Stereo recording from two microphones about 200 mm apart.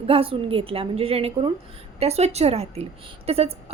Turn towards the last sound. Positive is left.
turn(degrees=-30)  # may be behind; listen again after turning